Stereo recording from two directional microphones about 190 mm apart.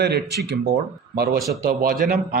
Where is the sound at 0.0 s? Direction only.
60° right (ahead or behind).